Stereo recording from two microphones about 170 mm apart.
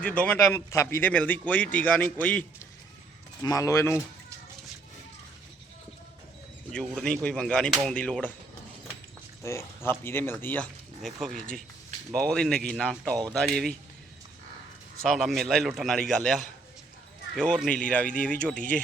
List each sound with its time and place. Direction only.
0.0 s speech: 10° left (ahead or behind)
3.4 s speech: 20° left (ahead or behind)
6.7 s speech: 5° left (ahead or behind)
9.4 s speech: 15° left (ahead or behind)
15.0 s speech: centre (ahead or behind)